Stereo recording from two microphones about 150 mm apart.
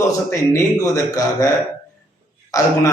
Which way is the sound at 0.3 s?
20° left (ahead or behind).